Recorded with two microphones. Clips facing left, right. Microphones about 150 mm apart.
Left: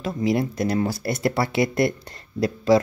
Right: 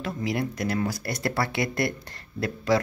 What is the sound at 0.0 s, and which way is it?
Speech, 25° left (ahead or behind).